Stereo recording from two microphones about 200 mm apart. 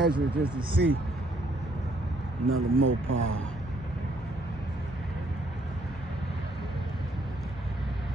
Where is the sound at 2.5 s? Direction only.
80° right.